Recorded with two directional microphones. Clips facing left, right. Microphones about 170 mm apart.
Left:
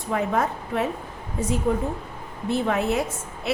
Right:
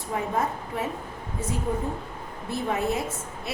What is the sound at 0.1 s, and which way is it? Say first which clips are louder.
Speech: left 4 dB; 85° left.